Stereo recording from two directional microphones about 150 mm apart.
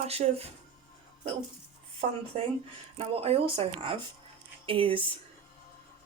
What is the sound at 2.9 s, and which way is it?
Speech, 40° right (ahead or behind).